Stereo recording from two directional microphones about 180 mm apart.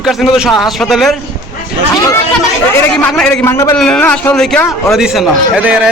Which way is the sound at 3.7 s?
5° left (ahead or behind).